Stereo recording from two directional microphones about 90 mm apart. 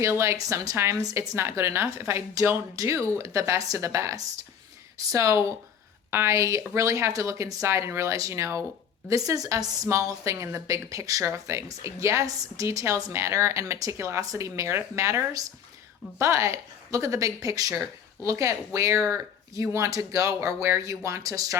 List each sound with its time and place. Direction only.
0.0 s a woman's voice: 30° right (ahead or behind)